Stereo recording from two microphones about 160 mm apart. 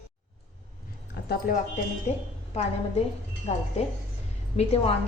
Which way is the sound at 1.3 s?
60° left (ahead or behind).